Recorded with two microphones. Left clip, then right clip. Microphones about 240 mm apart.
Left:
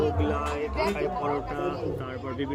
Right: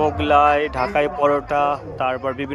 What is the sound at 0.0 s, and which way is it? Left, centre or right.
Speech, right.